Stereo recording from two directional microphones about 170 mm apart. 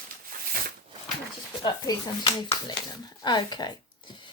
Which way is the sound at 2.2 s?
30° left (ahead or behind).